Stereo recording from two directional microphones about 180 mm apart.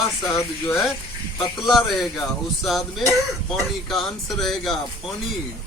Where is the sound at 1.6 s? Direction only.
Centre (ahead or behind).